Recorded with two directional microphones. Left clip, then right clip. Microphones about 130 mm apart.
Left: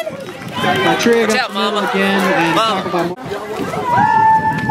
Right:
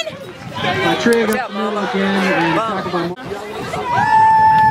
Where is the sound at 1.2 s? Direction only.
25° left (ahead or behind).